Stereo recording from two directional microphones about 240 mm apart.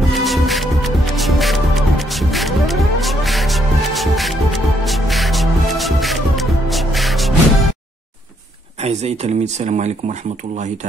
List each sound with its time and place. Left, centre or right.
0.1 s music: centre
8.8 s speech: right